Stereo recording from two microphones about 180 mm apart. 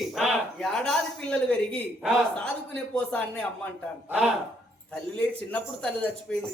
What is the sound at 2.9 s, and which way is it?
Speech, 5° left (ahead or behind).